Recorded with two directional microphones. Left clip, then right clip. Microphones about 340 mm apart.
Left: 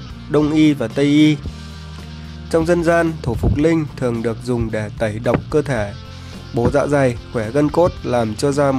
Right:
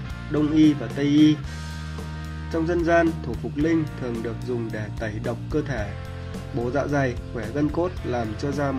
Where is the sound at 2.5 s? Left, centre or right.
Left.